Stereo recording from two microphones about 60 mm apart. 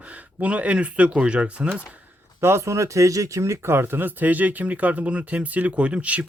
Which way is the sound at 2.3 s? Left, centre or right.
Right.